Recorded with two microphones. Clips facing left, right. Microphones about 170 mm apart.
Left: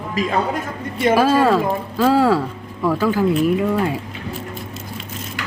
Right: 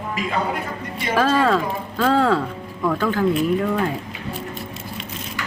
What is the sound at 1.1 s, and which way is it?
A woman's voice, 10° left (ahead or behind).